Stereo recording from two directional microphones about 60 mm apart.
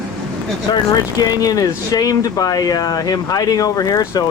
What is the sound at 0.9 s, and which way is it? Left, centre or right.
Speech, left.